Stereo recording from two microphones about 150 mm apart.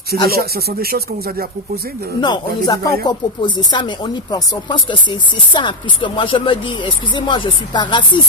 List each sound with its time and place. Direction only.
0.3 s speech: 90° right
2.2 s speech: 30° left (ahead or behind)